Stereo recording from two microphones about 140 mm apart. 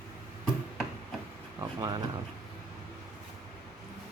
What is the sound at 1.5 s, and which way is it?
Speech, 25° right (ahead or behind).